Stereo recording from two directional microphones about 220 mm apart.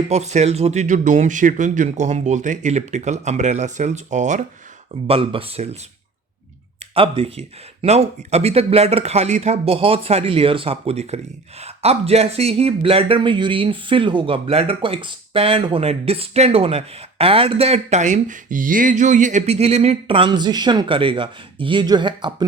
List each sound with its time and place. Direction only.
0.1 s speech: 30° right (ahead or behind)
6.9 s speech: 25° right (ahead or behind)